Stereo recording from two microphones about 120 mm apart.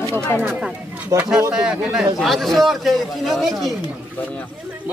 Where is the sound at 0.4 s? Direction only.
15° right (ahead or behind); by 3.7 s centre (ahead or behind).